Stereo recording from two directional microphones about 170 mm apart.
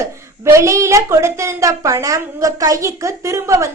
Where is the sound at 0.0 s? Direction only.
15° right (ahead or behind).